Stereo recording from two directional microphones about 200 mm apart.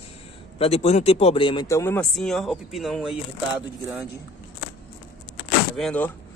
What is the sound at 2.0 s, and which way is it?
Speech, centre (ahead or behind).